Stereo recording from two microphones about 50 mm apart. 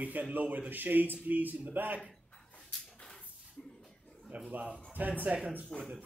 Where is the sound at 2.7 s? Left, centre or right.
Centre.